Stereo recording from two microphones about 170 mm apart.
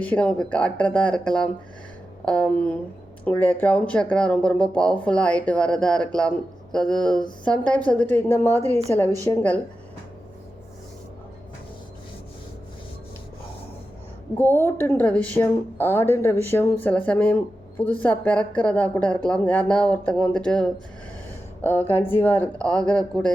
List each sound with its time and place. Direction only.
0.0 s a woman's voice: 5° left (ahead or behind)
8.5 s a woman's voice: 15° right (ahead or behind)
9.2 s a woman's voice: 10° left (ahead or behind)
14.3 s a woman's voice: 15° left (ahead or behind)